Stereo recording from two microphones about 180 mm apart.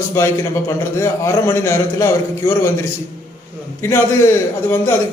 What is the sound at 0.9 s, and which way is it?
A man's voice, 15° left (ahead or behind).